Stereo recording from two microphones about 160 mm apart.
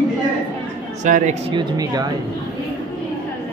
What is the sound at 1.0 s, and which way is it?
Speech, 55° right (ahead or behind).